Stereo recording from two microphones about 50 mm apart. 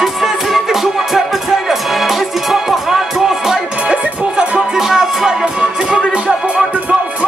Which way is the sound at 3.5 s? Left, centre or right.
Centre.